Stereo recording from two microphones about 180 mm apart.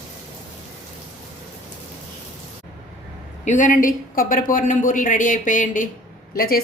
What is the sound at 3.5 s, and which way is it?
Speech, 45° left (ahead or behind).